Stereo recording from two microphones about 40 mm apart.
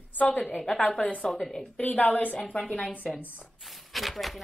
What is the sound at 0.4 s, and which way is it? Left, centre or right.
A woman's voice, centre.